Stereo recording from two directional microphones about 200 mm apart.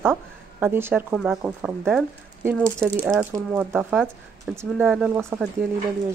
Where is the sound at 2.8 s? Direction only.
5° left (ahead or behind).